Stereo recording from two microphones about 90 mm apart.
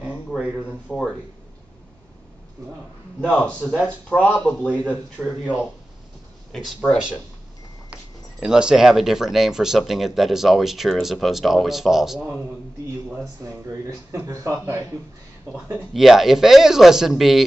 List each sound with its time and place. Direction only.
0.3 s speech: 10° right (ahead or behind)
0.8 s speech: 10° left (ahead or behind)
3.2 s speech: 15° left (ahead or behind)
6.5 s speech: 10° left (ahead or behind)
7.9 s speech: 10° right (ahead or behind)
14.2 s speech: 35° right (ahead or behind)
15.9 s speech: 5° right (ahead or behind)